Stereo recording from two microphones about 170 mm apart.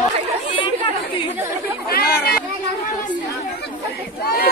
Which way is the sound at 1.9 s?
65° left (ahead or behind).